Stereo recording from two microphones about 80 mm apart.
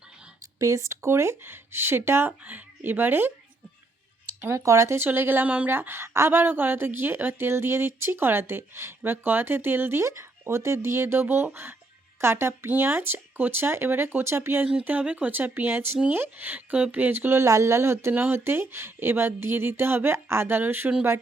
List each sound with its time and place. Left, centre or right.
0.6 s a woman's voice: right
4.5 s a woman's voice: right
14.8 s a woman's voice: centre
18.1 s a woman's voice: right